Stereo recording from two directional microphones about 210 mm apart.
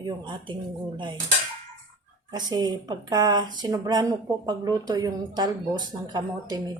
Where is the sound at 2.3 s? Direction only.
20° right (ahead or behind).